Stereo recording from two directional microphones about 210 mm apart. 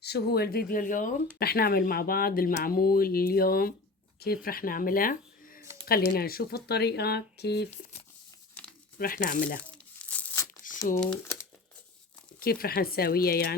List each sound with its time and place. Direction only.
0.0 s speech: 50° left (ahead or behind)
9.0 s speech: 40° left (ahead or behind)
10.0 s crumpling: 5° left (ahead or behind)
10.6 s crumpling: 40° left (ahead or behind)
11.0 s speech: 5° left (ahead or behind)
12.4 s speech: 45° left (ahead or behind)